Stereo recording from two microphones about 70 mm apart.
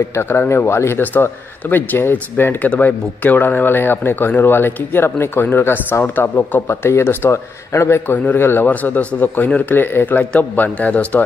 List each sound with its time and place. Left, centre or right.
0.1 s speech: left
8.1 s a man's voice: left